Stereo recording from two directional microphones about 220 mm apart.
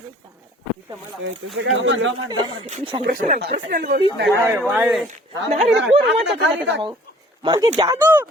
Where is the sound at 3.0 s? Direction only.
40° right (ahead or behind).